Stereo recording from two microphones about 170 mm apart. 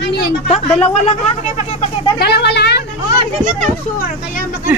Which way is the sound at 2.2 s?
75° left (ahead or behind).